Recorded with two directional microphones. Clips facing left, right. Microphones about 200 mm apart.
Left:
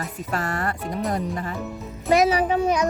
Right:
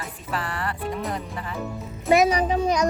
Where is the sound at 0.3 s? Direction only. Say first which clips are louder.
Left 2 dB; 45° left (ahead or behind).